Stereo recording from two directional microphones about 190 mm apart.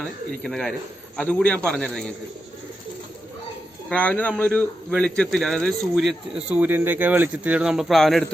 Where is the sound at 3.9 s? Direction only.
5° left (ahead or behind).